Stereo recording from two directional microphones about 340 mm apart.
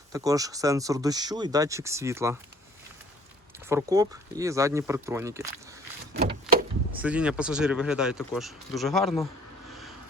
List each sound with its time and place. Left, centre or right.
0.1 s speech: centre
3.7 s speech: centre
7.0 s speech: centre